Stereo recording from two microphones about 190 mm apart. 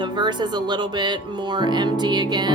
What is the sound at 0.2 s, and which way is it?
Music, 25° right (ahead or behind).